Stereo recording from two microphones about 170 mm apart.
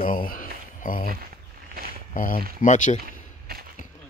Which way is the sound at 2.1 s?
55° left (ahead or behind).